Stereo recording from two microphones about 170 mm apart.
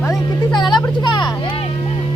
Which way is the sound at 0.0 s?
20° left (ahead or behind).